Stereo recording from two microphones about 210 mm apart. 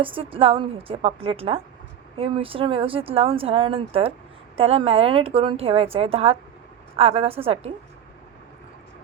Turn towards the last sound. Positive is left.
turn(degrees=-25)  # may be behind; listen again after turning